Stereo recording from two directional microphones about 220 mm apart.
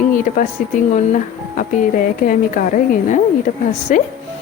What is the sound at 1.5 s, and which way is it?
A woman's voice, 40° left (ahead or behind).